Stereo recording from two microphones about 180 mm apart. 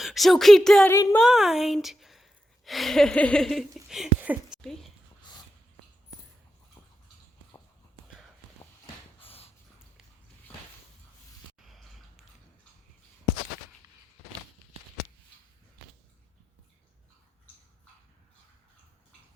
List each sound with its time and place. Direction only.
0.0 s speech: centre (ahead or behind)
9.2 s dog: 35° left (ahead or behind)
11.6 s a sound: centre (ahead or behind)